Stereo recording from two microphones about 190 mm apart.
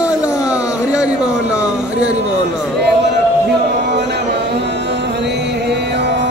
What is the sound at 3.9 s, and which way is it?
Music, 60° right (ahead or behind).